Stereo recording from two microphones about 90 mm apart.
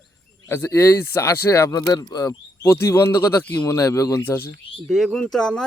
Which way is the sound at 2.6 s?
25° left (ahead or behind).